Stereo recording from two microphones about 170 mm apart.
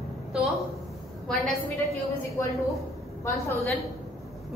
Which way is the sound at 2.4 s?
15° left (ahead or behind).